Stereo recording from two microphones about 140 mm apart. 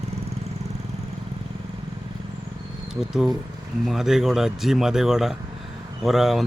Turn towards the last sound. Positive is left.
turn(degrees=0)  # may be behind; listen again after turning